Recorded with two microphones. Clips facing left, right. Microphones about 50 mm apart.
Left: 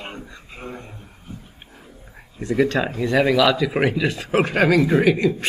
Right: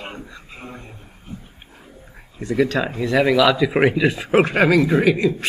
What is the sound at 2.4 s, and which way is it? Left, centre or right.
Speech, centre.